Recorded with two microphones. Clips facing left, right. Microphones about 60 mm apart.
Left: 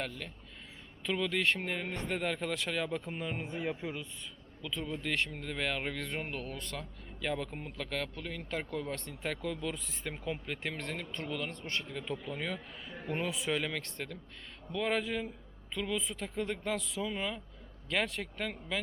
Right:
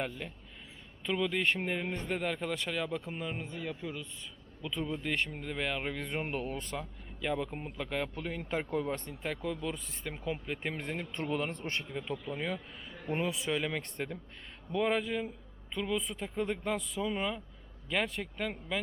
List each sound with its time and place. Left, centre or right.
0.0 s speech: centre
1.0 s speech: centre
3.4 s speech: centre
4.6 s speech: centre
6.2 s speech: right
6.7 s speech: centre
9.0 s speech: centre
11.1 s speech: right
11.9 s speech: centre